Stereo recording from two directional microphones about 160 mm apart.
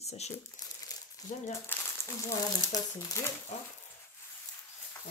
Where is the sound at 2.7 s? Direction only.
20° left (ahead or behind).